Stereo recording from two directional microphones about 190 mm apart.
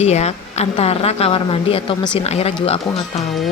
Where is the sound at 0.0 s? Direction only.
35° left (ahead or behind).